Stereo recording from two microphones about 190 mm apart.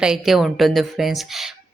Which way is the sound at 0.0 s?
Centre (ahead or behind).